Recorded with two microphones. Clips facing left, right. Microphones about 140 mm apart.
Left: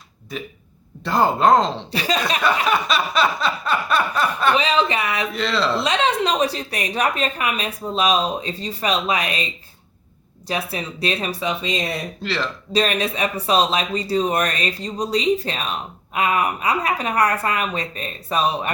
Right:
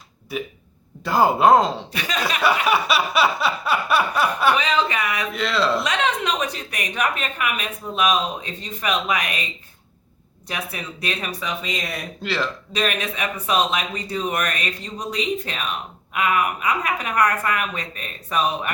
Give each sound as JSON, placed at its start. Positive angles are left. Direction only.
{"t": 0.3, "sound": "a sound", "side_deg": -5}
{"t": 1.7, "sound": "a woman's voice", "side_deg": 30}
{"t": 2.4, "sound": "a sound", "side_deg": -10}
{"t": 4.5, "sound": "speech", "side_deg": 25}
{"t": 5.3, "sound": "speech", "side_deg": 0}
{"t": 5.7, "sound": "a woman's voice", "side_deg": 30}
{"t": 10.5, "sound": "speech", "side_deg": 30}
{"t": 12.2, "sound": "speech", "side_deg": 0}
{"t": 12.7, "sound": "a woman's voice", "side_deg": 35}